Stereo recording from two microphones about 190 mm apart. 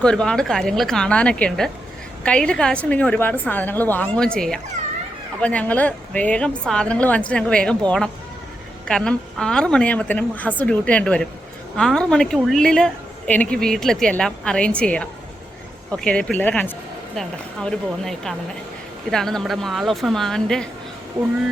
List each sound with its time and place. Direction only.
0.0 s a woman's voice: 5° left (ahead or behind)